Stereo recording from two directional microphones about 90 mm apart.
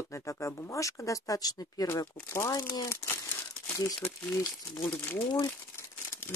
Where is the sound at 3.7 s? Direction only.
30° left (ahead or behind).